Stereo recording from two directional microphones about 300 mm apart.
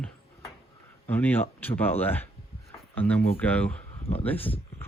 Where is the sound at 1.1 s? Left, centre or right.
Centre.